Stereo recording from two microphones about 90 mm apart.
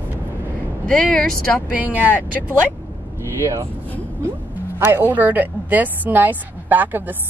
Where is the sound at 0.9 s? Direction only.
10° left (ahead or behind).